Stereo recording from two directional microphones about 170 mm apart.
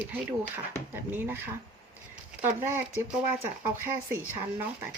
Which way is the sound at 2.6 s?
15° right (ahead or behind).